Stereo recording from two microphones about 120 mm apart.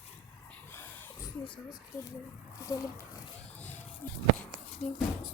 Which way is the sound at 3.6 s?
15° left (ahead or behind).